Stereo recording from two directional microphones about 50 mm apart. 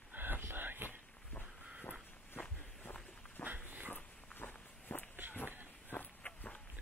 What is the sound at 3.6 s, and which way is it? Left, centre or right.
Dog, right.